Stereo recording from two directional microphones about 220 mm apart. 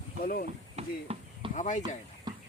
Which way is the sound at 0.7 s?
25° right (ahead or behind).